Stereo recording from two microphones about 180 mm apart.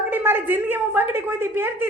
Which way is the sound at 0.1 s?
10° right (ahead or behind).